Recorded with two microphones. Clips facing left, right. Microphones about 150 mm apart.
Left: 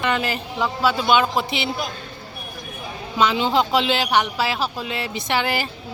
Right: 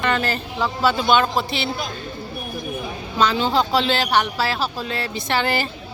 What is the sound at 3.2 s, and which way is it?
Speech, 20° left (ahead or behind).